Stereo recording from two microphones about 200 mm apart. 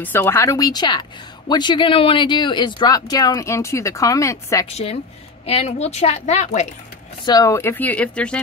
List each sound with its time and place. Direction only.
0.0 s speech: 10° left (ahead or behind)
4.6 s a woman's voice: 30° left (ahead or behind)
7.2 s speech: 15° left (ahead or behind)